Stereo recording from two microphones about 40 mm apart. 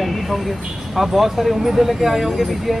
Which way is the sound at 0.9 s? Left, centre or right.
Centre.